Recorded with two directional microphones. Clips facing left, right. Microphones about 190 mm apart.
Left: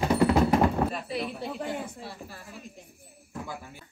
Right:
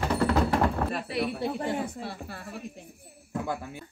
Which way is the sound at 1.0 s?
70° right (ahead or behind).